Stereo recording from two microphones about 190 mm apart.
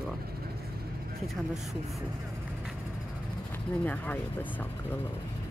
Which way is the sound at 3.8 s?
10° left (ahead or behind).